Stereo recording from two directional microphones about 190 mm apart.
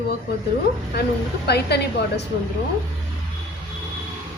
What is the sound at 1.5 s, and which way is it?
Speech, 60° left (ahead or behind).